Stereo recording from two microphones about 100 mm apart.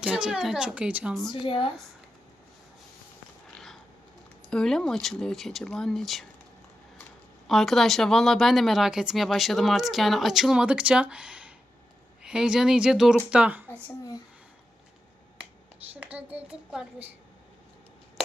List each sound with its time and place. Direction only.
0.0 s a woman's voice: 5° right (ahead or behind)
1.3 s speech: 55° left (ahead or behind)
3.5 s a sound: 5° left (ahead or behind)
4.4 s speech: 5° left (ahead or behind)
7.4 s a woman's voice: centre (ahead or behind)
13.3 s a woman's voice: 15° right (ahead or behind)
15.9 s speech: 15° right (ahead or behind)